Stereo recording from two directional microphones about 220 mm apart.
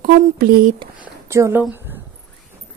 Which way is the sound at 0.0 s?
40° right (ahead or behind).